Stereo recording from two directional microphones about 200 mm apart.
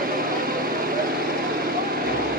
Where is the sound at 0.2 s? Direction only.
45° right (ahead or behind).